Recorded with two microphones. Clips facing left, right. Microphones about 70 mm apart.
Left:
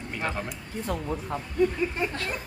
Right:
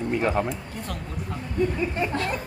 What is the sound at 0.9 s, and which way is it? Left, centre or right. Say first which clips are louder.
Speech: left 6 dB; left.